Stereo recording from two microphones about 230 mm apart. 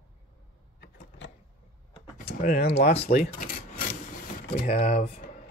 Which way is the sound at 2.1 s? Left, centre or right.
Left.